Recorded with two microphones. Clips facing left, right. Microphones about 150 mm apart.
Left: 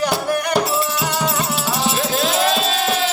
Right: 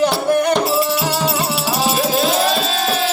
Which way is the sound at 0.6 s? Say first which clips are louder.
Right 4 dB; 25° right (ahead or behind).